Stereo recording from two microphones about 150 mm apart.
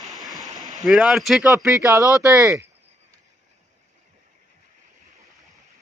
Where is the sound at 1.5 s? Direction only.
20° right (ahead or behind).